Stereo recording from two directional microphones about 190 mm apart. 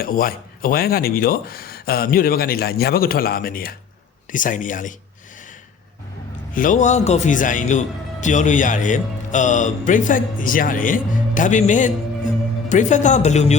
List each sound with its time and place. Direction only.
0.0 s speech: 50° left (ahead or behind)
6.5 s a man's voice: 45° left (ahead or behind)